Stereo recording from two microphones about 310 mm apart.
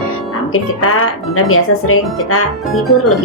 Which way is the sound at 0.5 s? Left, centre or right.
Left.